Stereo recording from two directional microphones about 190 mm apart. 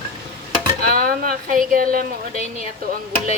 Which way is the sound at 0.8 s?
50° right (ahead or behind).